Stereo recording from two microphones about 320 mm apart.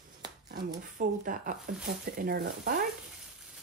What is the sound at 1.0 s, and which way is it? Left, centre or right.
Speech, right.